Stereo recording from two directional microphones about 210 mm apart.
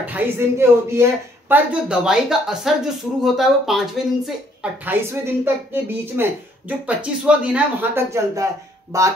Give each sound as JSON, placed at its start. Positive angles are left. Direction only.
{"t": 0.0, "sound": "a woman's voice", "side_deg": -10}